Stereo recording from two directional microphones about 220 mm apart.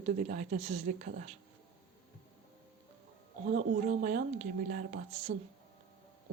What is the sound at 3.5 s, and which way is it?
A woman's voice, 35° right (ahead or behind).